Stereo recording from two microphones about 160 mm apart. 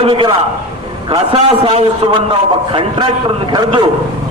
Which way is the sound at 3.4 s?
30° right (ahead or behind).